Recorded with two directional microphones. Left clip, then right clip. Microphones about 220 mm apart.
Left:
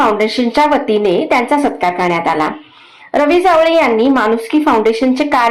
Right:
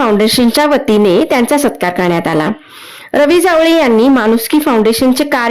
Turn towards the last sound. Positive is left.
turn(degrees=-45)  # may be behind; listen again after turning